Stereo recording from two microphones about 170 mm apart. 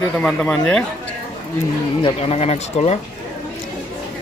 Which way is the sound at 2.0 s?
35° left (ahead or behind).